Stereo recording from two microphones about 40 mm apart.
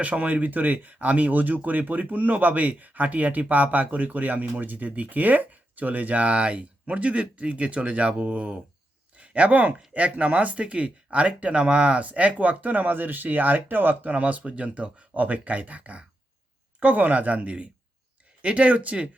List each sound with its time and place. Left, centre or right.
0.0 s speech: right
14.1 s speech: right